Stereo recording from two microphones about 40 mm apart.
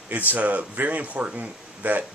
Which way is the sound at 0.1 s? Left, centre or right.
Right.